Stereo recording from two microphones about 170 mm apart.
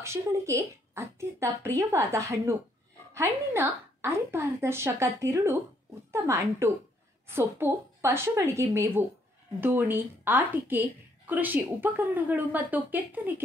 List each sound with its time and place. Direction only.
0.0 s a woman's voice: 15° right (ahead or behind)